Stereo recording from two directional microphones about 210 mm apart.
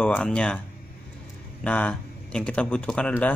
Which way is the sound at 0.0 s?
5° left (ahead or behind).